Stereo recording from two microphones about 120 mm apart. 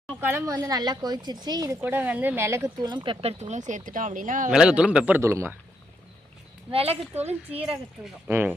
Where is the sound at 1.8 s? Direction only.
15° right (ahead or behind); by 3.1 s 40° right (ahead or behind).